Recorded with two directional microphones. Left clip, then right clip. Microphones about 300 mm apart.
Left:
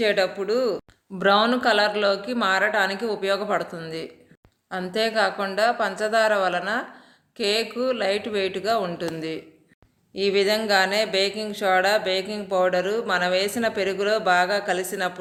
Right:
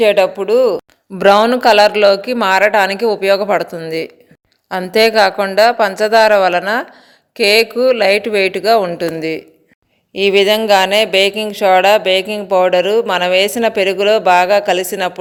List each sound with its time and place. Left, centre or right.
0.0 s speech: right